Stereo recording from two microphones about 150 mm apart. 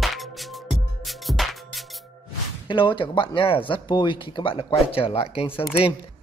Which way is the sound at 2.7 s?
30° left (ahead or behind).